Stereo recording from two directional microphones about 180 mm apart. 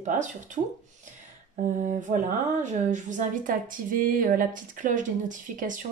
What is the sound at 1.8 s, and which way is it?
Speech, 40° right (ahead or behind).